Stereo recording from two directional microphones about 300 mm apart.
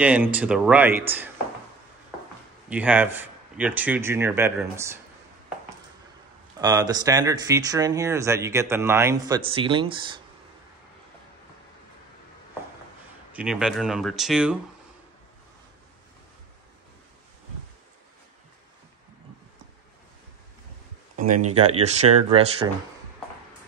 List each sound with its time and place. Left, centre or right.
0.0 s a man's voice: centre
2.7 s a man's voice: centre
6.6 s speech: centre
13.3 s a man's voice: centre
21.5 s speech: centre